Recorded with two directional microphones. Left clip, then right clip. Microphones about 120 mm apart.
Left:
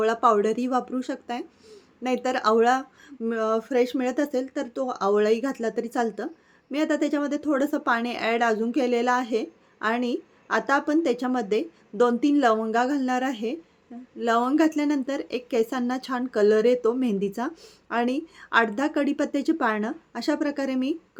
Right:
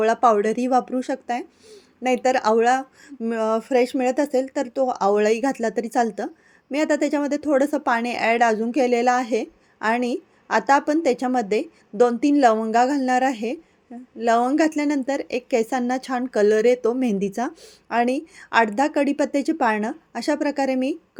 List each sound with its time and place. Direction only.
0.0 s a woman's voice: 30° right (ahead or behind)